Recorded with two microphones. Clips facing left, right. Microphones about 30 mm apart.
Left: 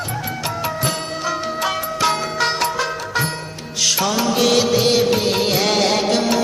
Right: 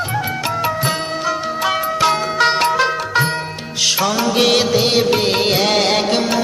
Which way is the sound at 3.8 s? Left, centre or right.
Right.